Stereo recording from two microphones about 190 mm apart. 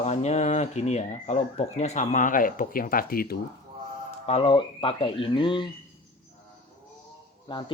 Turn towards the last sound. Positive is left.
turn(degrees=25)  # may be behind; listen again after turning